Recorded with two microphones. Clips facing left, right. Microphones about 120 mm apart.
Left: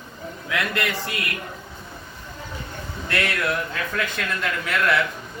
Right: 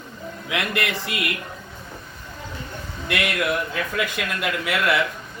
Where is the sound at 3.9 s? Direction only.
10° right (ahead or behind).